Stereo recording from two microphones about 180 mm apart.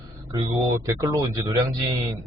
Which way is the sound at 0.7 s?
20° right (ahead or behind).